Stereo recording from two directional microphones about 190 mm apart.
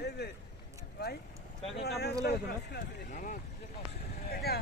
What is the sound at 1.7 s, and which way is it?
Speech, 60° left (ahead or behind).